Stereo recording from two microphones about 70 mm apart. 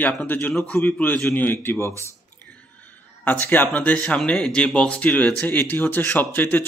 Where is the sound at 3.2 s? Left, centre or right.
Left.